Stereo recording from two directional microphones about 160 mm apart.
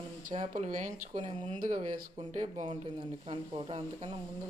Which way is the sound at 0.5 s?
50° right (ahead or behind).